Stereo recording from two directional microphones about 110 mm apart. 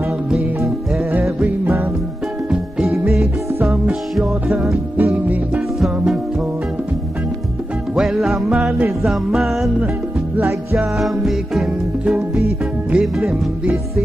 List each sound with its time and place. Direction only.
1.4 s music: 15° right (ahead or behind)
2.9 s music: 20° right (ahead or behind)
4.2 s music: 5° right (ahead or behind)
4.9 s music: 15° right (ahead or behind)
7.9 s music: 5° right (ahead or behind)
8.5 s music: 10° right (ahead or behind)
10.3 s music: 15° right (ahead or behind)
11.0 s music: centre (ahead or behind)